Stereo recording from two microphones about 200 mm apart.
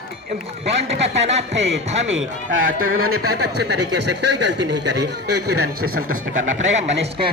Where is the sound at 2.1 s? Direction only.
75° right (ahead or behind).